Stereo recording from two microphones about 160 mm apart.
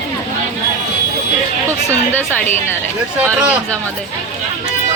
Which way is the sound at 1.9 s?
10° left (ahead or behind).